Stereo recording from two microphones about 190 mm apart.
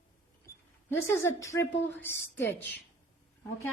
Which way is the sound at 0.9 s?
15° left (ahead or behind).